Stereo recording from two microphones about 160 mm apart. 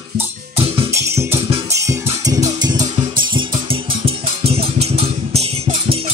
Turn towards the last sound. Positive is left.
turn(degrees=-40)  # may be behind; listen again after turning